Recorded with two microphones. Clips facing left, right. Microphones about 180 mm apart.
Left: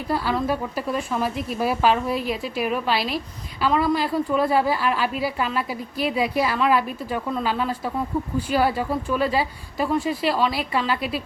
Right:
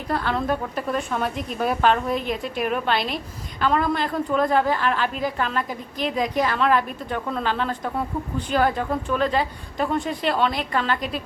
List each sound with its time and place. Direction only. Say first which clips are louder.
0.1 s a woman's voice: even; 5° left (ahead or behind)